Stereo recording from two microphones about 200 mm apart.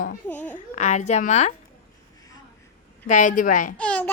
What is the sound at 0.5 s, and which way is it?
Speech, 35° left (ahead or behind).